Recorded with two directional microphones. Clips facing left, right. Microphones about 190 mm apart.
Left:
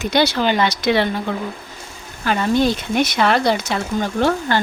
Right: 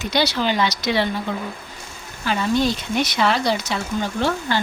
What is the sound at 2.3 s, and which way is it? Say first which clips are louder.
Speech: left 3 dB; 55° left (ahead or behind).